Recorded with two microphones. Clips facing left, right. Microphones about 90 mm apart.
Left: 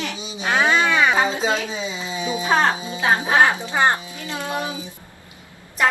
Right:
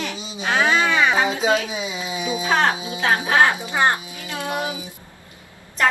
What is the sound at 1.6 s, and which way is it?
Speech, 15° right (ahead or behind).